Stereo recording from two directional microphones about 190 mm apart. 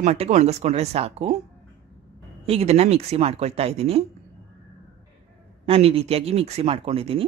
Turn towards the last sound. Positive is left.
turn(degrees=-30)  # may be behind; listen again after turning